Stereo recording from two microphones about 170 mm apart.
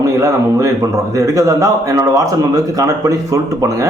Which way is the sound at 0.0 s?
20° right (ahead or behind).